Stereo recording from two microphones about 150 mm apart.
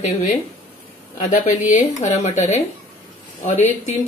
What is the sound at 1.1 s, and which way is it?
Speech, 55° left (ahead or behind).